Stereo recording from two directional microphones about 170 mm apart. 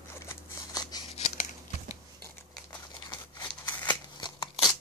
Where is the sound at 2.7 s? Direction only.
25° left (ahead or behind).